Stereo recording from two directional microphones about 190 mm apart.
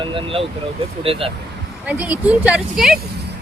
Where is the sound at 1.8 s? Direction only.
5° right (ahead or behind).